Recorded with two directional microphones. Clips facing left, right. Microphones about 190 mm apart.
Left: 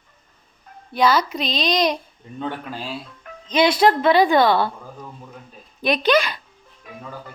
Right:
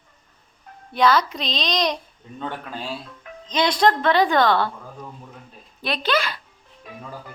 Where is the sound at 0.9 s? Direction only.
Centre (ahead or behind).